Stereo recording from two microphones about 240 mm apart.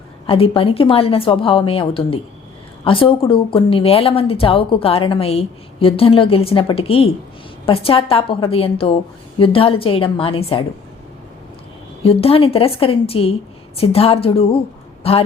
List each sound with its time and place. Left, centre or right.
0.3 s speech: left
12.0 s speech: left